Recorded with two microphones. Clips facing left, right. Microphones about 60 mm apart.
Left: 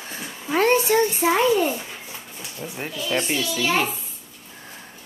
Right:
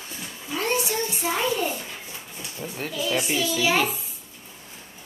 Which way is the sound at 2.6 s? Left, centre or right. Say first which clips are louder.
Left 1 dB; centre.